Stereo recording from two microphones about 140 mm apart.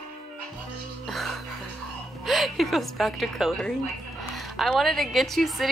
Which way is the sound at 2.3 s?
Centre (ahead or behind).